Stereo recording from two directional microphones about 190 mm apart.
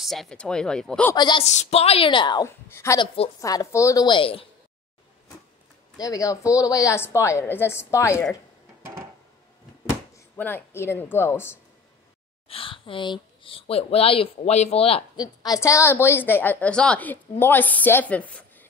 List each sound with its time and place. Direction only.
0.0 s speech: centre (ahead or behind)
1.1 s a woman's voice: 25° left (ahead or behind)
1.4 s a woman's voice: 35° left (ahead or behind)
5.9 s speech: 20° left (ahead or behind)
10.1 s speech: 10° left (ahead or behind)
12.4 s speech: 30° left (ahead or behind); by 18.7 s 10° left (ahead or behind)